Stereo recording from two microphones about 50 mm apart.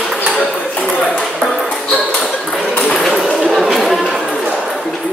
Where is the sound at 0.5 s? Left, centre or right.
Left.